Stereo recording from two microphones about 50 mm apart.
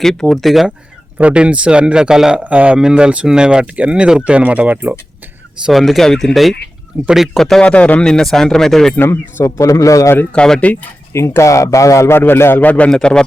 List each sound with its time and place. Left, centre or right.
0.0 s speech: centre
1.2 s speech: right
2.4 s speech: right
2.7 s speech: centre; by 4.9 s right
5.7 s speech: centre
6.9 s speech: right
7.3 s speech: centre
7.6 s speech: left
8.0 s speech: centre
9.4 s speech: left
10.3 s speech: centre
11.1 s speech: left
12.5 s speech: left
12.9 s speech: centre